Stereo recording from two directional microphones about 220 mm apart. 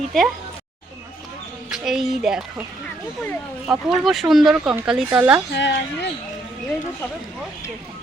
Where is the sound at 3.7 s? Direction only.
Centre (ahead or behind).